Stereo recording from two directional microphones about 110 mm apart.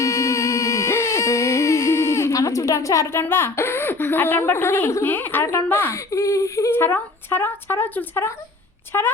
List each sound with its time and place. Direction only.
0.0 s music: 30° left (ahead or behind)
8.9 s speech: 20° left (ahead or behind)